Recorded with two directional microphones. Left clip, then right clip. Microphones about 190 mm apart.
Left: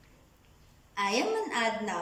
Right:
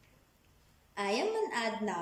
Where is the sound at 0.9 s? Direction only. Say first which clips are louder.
Left 4 dB; 25° right (ahead or behind).